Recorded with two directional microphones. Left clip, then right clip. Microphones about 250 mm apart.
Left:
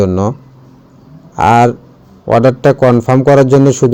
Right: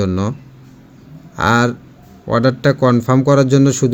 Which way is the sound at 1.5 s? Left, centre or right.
Centre.